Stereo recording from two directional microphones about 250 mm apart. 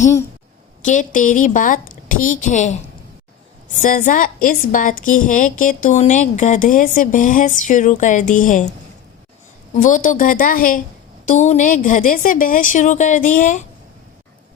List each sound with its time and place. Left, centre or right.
0.8 s a woman's voice: left
9.7 s a woman's voice: left